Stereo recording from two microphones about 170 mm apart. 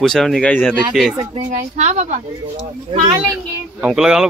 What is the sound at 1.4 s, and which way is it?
Speech, 45° right (ahead or behind).